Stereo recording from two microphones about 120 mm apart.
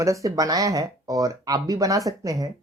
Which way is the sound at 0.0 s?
25° right (ahead or behind).